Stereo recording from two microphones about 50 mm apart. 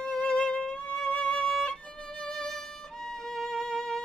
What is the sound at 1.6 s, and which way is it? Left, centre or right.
Violin, centre.